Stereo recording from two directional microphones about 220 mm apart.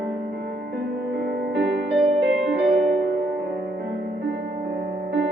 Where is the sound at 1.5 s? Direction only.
50° right (ahead or behind).